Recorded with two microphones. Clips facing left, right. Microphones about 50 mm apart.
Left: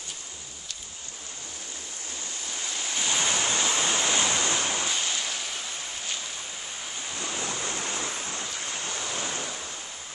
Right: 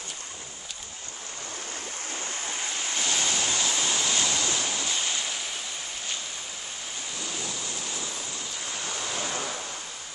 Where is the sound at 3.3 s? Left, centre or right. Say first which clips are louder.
Left 1 dB; left.